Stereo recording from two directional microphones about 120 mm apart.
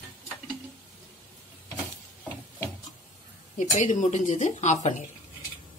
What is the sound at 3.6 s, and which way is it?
Speech, 90° left.